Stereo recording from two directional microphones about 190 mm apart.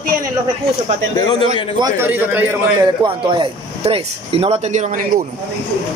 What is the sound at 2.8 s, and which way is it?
Speech, 25° right (ahead or behind).